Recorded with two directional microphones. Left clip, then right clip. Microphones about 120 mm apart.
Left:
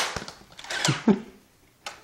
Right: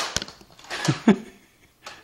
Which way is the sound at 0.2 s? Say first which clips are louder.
Right 6 dB; 55° right (ahead or behind).